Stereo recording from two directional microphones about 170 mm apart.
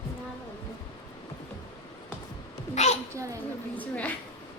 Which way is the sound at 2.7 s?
40° left (ahead or behind).